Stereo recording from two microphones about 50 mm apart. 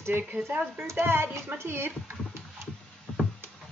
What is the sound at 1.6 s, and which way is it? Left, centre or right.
Speech, right.